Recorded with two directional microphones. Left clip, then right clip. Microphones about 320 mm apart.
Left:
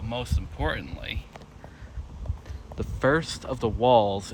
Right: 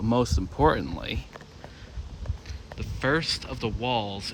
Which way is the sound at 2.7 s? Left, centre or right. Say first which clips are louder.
Left 3 dB; centre.